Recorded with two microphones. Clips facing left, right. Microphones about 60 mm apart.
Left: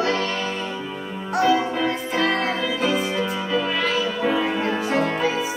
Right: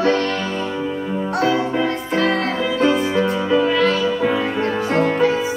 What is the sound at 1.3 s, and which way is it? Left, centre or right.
Music, centre.